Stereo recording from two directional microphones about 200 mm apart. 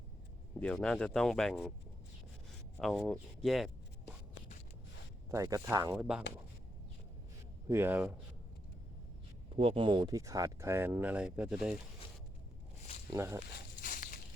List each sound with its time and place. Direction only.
0.6 s speech: 5° left (ahead or behind)
2.7 s speech: centre (ahead or behind)
5.3 s speech: 15° right (ahead or behind)
7.7 s speech: 10° right (ahead or behind)
9.6 s speech: 25° right (ahead or behind); by 11.8 s 5° right (ahead or behind)
13.1 s speech: 15° right (ahead or behind)
13.8 s a sound: 40° left (ahead or behind)